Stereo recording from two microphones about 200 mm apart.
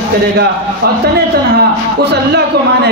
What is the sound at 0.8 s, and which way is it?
Speech, 55° right (ahead or behind).